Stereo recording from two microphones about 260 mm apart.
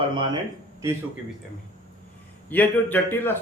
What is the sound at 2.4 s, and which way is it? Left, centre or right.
Speech, centre.